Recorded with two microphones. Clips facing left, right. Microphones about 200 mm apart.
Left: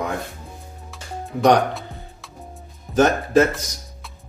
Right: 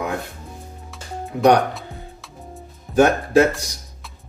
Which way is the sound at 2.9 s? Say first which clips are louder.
Right 1 dB; 10° right (ahead or behind).